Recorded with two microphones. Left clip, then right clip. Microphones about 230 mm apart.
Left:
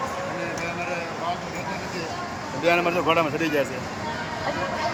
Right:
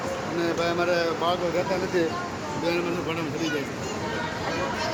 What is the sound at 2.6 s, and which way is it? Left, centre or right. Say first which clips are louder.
Speech: left 7 dB; centre.